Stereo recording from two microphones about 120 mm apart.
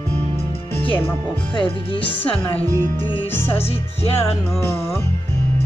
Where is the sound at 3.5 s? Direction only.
55° left (ahead or behind).